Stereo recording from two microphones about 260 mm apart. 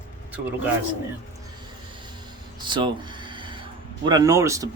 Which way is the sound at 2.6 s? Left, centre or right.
Centre.